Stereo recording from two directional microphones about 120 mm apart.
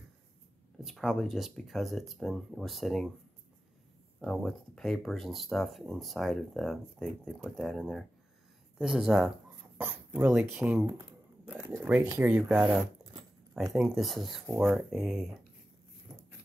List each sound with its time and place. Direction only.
0.7 s speech: centre (ahead or behind)
4.2 s speech: 5° left (ahead or behind)